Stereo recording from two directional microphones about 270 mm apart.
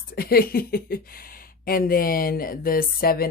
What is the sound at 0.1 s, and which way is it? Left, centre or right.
Speech, left.